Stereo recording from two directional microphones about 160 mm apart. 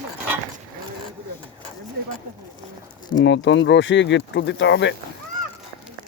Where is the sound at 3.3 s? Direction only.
90° left.